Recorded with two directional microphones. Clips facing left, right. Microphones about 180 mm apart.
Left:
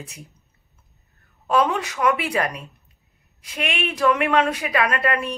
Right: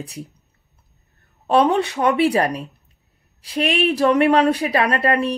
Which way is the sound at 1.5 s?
30° right (ahead or behind).